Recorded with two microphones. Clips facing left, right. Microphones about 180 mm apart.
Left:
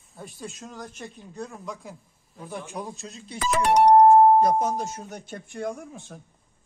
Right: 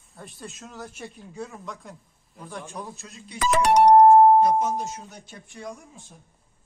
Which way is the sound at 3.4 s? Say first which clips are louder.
Right 1 dB; 80° right.